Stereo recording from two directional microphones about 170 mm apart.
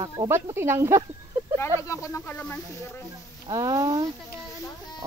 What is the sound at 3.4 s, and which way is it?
Speech, 20° right (ahead or behind).